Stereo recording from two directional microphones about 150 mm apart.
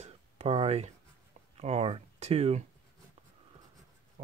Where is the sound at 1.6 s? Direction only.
45° right (ahead or behind).